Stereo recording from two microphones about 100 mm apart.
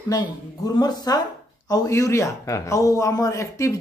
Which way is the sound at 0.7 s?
40° left (ahead or behind).